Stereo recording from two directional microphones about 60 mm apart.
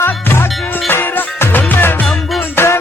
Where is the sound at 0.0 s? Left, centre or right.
Left.